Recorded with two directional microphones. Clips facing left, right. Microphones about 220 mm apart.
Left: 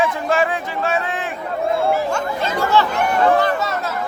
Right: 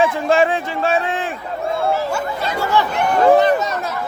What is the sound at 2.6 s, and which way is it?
Speech, 10° right (ahead or behind).